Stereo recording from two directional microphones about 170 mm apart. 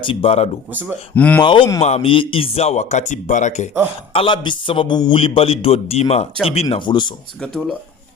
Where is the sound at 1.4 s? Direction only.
30° left (ahead or behind); by 3.7 s 45° left (ahead or behind).